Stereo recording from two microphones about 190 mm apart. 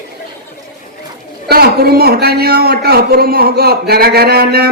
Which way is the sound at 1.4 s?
55° right (ahead or behind).